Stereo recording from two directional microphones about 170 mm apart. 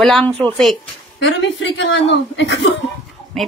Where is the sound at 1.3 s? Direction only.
90° left.